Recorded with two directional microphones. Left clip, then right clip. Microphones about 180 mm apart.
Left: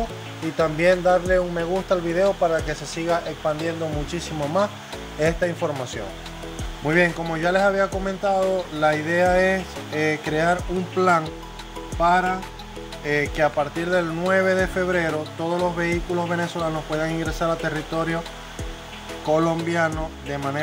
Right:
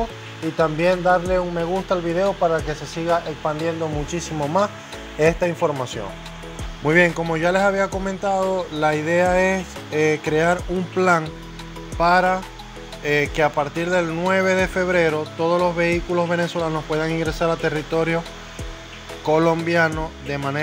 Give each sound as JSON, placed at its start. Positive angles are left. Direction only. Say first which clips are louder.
{"t": 0.6, "sound": "speech", "louder": "even", "side_deg": 0}
{"t": 6.9, "sound": "speech", "louder": "right 3 dB", "side_deg": -10}
{"t": 13.6, "sound": "speech", "louder": "right 2 dB", "side_deg": 0}
{"t": 19.5, "sound": "speech", "louder": "right 4 dB", "side_deg": -5}